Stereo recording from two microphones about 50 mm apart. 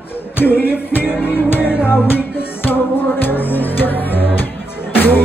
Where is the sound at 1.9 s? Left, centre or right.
Left.